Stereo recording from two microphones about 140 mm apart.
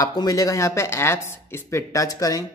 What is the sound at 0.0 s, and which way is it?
Speech, 30° left (ahead or behind).